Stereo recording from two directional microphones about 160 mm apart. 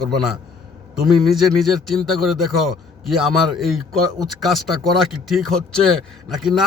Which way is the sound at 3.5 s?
Centre (ahead or behind).